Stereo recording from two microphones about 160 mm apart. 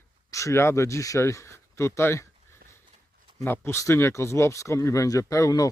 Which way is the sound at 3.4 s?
15° left (ahead or behind).